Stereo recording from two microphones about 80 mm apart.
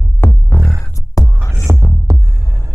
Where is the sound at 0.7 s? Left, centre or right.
Left.